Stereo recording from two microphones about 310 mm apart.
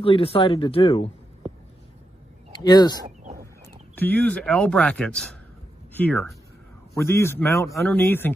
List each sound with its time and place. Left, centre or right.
0.0 s speech: centre
2.6 s speech: centre